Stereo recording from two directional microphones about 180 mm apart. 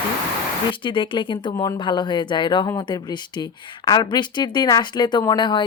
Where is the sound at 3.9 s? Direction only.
25° left (ahead or behind).